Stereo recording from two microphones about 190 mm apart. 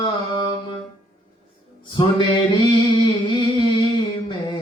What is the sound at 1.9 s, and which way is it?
Mantra, 25° left (ahead or behind).